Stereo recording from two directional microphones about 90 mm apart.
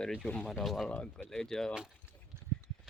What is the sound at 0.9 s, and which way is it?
Speech, 10° left (ahead or behind).